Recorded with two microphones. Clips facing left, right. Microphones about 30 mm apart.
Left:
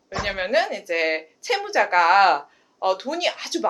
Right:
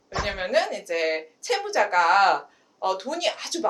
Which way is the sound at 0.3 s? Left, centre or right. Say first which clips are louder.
Left 2 dB; centre.